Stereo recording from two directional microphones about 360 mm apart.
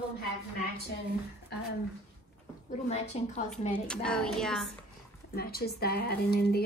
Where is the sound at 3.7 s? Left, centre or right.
Centre.